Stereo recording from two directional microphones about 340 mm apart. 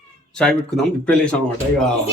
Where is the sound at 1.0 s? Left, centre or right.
Centre.